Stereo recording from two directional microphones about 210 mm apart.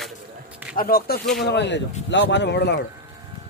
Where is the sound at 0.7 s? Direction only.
45° left (ahead or behind).